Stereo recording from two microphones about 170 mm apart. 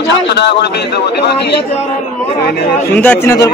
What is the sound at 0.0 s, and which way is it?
Speech, 85° left.